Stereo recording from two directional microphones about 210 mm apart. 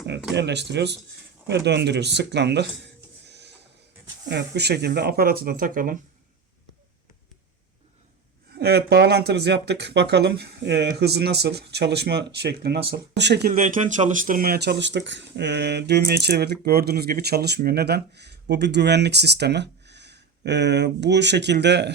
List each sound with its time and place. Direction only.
0.0 s speech: 55° right (ahead or behind)
8.5 s speech: 50° right (ahead or behind)
13.5 s speech: 35° right (ahead or behind); by 21.9 s 55° right (ahead or behind)